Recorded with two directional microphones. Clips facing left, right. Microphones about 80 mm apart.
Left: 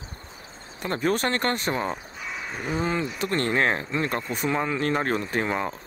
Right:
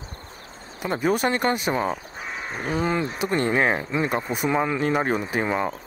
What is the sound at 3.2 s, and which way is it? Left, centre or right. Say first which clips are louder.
Speech: right 2 dB; centre.